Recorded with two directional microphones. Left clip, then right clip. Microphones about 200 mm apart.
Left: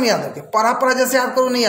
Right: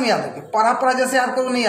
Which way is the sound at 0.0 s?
30° left (ahead or behind).